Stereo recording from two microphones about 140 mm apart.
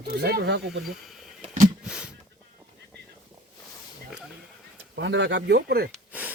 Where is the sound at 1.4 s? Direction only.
65° right (ahead or behind).